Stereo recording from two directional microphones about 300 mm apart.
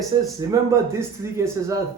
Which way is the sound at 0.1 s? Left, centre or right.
Centre.